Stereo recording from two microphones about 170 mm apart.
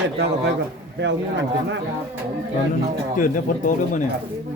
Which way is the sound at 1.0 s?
90° right.